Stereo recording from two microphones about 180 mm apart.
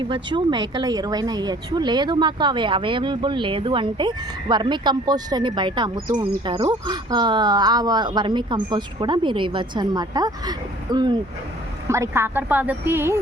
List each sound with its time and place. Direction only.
0.0 s a woman's voice: 25° right (ahead or behind)